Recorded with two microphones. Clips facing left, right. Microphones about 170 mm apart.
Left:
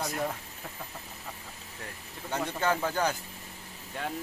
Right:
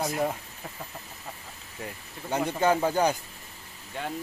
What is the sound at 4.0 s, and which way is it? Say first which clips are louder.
Speech: right 1 dB; centre (ahead or behind).